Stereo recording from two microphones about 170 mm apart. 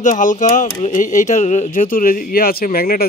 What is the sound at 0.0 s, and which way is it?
Speech, 50° left (ahead or behind).